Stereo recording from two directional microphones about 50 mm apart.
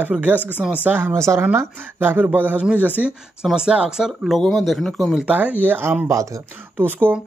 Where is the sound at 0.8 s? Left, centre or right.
Right.